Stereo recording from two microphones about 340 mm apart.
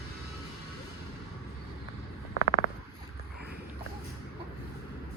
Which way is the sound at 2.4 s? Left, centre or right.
Left.